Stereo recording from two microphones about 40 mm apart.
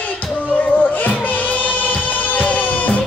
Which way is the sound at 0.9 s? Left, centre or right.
Left.